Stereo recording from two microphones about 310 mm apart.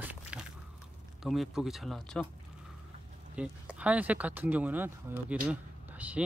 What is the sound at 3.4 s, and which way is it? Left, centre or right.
Speech, centre.